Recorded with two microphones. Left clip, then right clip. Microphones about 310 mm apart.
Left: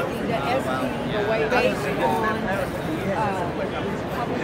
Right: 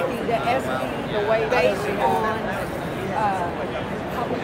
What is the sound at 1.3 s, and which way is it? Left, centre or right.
Speech, right.